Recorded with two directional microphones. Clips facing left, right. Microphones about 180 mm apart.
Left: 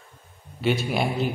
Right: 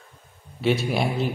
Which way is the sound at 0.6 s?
Centre (ahead or behind).